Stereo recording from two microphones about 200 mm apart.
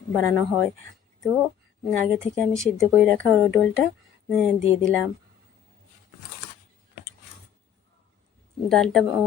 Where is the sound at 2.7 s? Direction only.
Centre (ahead or behind).